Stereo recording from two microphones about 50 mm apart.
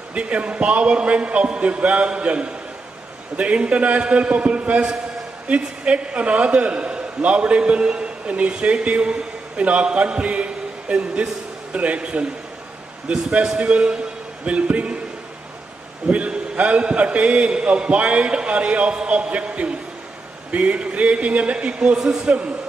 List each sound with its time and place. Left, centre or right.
0.1 s a man's voice: right
16.1 s a man's voice: right